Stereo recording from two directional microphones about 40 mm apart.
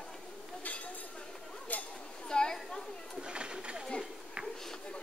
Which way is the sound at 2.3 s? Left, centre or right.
Centre.